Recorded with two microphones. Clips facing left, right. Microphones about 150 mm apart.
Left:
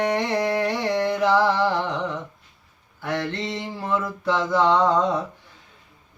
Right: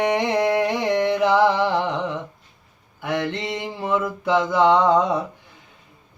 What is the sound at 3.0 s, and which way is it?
Mantra, 15° right (ahead or behind).